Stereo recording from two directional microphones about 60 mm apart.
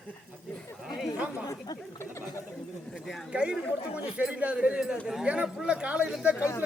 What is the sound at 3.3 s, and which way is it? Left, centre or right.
Speech, centre.